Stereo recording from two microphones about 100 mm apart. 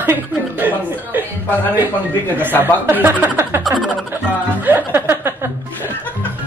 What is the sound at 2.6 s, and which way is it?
Speech, 20° right (ahead or behind).